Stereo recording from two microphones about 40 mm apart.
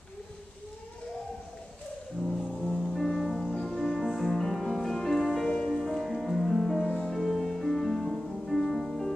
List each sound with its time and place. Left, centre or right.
2.6 s music: centre
5.5 s music: centre
5.9 s music: centre